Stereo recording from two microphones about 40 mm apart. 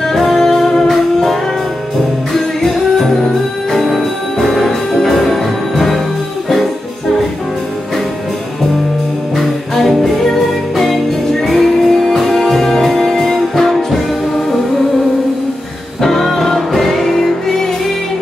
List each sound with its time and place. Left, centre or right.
0.1 s music: centre
2.3 s music: centre
9.8 s music: centre
16.0 s music: centre